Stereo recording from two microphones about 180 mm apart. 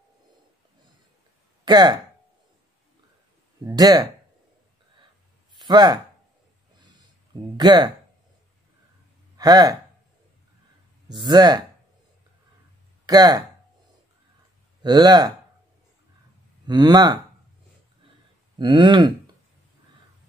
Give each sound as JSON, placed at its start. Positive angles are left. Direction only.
{"t": 1.6, "sound": "speech", "side_deg": -20}
{"t": 3.6, "sound": "speech", "side_deg": -20}
{"t": 5.6, "sound": "speech", "side_deg": -25}
{"t": 7.5, "sound": "speech", "side_deg": -25}
{"t": 9.4, "sound": "speech", "side_deg": -20}
{"t": 11.1, "sound": "speech", "side_deg": -25}
{"t": 13.0, "sound": "speech", "side_deg": -20}
{"t": 14.8, "sound": "speech", "side_deg": -25}
{"t": 16.6, "sound": "speech", "side_deg": -20}
{"t": 18.6, "sound": "speech", "side_deg": -25}